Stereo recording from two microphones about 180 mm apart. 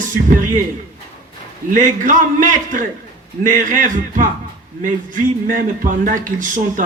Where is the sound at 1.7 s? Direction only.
45° right (ahead or behind).